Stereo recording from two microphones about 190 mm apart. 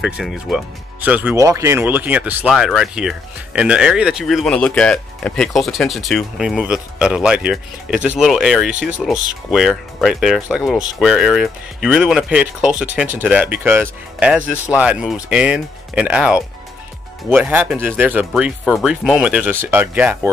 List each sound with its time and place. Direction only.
0.0 s speech: centre (ahead or behind)